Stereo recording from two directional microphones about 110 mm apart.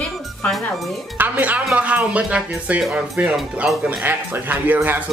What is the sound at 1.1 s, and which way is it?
Speech, 15° right (ahead or behind).